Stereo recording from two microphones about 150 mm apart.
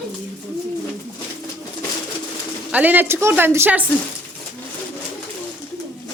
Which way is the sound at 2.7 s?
10° right (ahead or behind).